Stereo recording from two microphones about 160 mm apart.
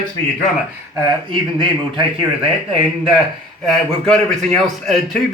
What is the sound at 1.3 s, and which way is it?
Speech, 30° right (ahead or behind).